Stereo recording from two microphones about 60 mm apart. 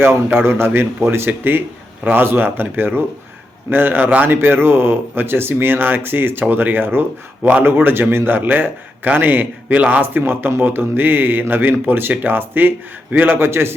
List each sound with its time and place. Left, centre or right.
0.3 s a man's voice: right